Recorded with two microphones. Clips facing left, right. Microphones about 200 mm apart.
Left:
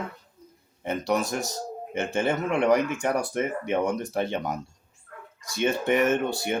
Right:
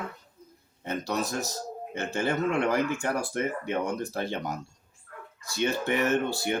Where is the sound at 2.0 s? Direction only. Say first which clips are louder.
Left 2 dB; 25° left (ahead or behind).